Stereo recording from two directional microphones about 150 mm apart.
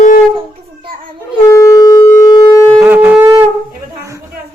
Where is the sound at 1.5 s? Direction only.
20° left (ahead or behind).